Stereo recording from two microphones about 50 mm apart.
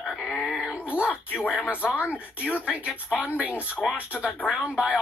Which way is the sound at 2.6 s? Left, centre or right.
Right.